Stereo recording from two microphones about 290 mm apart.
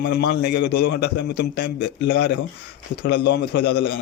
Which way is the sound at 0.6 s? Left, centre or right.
Left.